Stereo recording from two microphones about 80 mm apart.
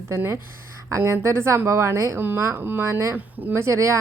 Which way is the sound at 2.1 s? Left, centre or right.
Right.